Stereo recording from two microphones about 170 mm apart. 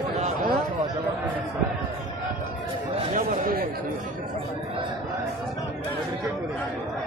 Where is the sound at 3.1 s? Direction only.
55° right (ahead or behind).